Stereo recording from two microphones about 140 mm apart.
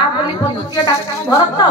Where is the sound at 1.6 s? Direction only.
30° left (ahead or behind).